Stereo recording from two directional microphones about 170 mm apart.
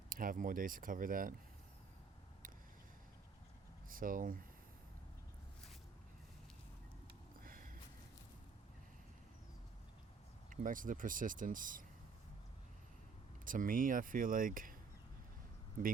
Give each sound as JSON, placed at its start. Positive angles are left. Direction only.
{"t": 0.1, "sound": "speech", "side_deg": -55}
{"t": 3.8, "sound": "speech", "side_deg": -55}
{"t": 7.4, "sound": "a sound", "side_deg": -55}
{"t": 10.5, "sound": "speech", "side_deg": -50}
{"t": 13.4, "sound": "speech", "side_deg": -55}